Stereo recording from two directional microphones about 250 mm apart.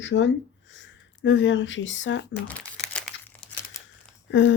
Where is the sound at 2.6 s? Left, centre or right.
Centre.